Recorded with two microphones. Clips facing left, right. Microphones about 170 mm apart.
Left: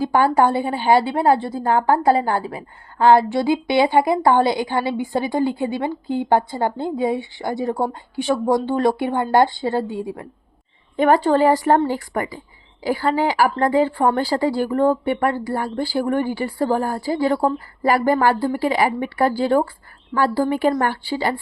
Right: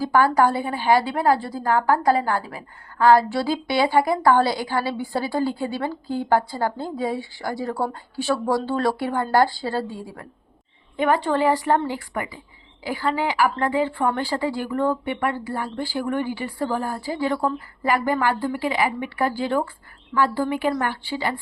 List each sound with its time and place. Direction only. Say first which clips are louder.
0.0 s a woman's voice: left 2 dB; 25° left (ahead or behind)
10.9 s a woman's voice: left 5 dB; 40° left (ahead or behind)